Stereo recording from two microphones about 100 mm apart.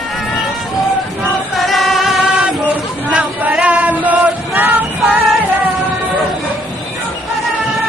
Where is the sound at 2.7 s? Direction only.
15° right (ahead or behind).